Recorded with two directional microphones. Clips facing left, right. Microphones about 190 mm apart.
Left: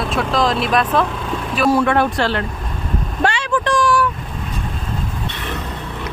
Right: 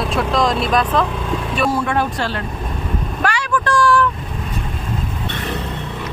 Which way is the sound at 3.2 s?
25° left (ahead or behind).